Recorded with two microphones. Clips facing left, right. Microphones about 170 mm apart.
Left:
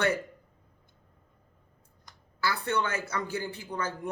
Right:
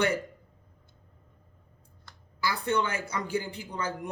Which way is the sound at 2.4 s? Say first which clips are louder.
Right 1 dB; 15° right (ahead or behind).